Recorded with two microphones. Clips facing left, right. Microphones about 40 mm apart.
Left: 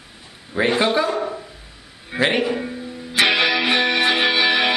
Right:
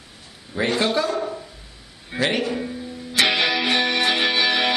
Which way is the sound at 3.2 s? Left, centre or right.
Centre.